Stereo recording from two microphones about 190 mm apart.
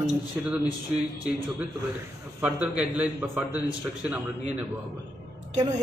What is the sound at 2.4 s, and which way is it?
A man's voice, 5° right (ahead or behind).